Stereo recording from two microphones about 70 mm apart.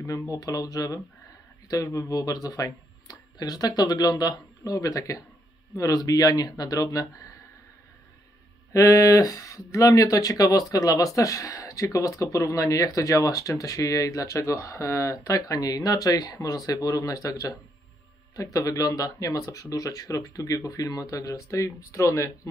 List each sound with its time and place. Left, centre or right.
0.0 s speech: left
8.7 s speech: left